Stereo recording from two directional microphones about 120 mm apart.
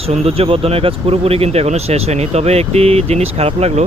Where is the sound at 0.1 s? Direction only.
55° right (ahead or behind).